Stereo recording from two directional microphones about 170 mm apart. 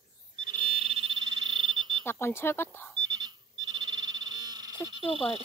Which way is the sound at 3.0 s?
25° right (ahead or behind).